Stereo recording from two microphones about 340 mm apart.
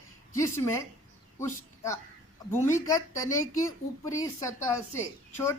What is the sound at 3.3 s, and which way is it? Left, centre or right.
Speech, left.